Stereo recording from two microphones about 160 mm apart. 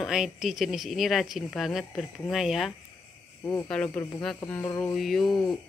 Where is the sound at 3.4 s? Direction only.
20° left (ahead or behind).